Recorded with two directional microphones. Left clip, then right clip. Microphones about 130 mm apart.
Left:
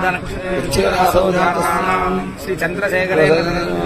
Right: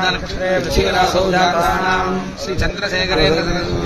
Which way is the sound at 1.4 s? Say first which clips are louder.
Right 1 dB; 30° right (ahead or behind).